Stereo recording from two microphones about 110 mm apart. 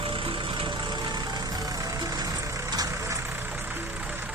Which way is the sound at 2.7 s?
35° right (ahead or behind).